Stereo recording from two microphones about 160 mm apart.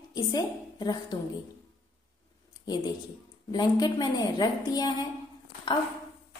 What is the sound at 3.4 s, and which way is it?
A woman's voice, 25° left (ahead or behind).